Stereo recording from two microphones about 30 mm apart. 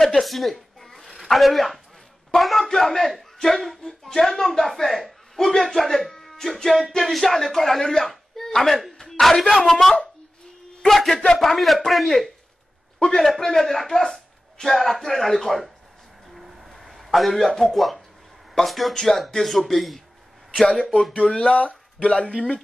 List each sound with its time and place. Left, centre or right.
0.2 s zipper: centre
1.2 s a man's voice: centre
7.8 s speech: left
8.1 s a sound: centre
9.2 s speech: centre
10.9 s a sound: centre
11.3 s a man's voice: centre
13.0 s speech: centre
16.3 s vehicle: centre
16.6 s a sound: centre
17.5 s speech: centre
17.7 s a man's voice: centre
18.9 s a man's voice: centre
20.6 s speech: left